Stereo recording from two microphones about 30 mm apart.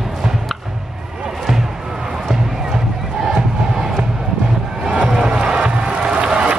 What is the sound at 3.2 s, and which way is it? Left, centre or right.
Crowd, centre.